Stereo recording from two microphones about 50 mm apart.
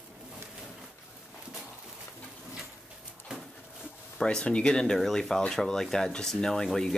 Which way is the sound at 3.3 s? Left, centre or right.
Centre.